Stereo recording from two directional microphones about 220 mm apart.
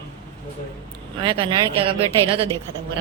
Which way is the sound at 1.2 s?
25° right (ahead or behind).